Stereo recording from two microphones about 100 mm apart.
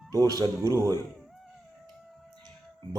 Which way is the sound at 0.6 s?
30° right (ahead or behind).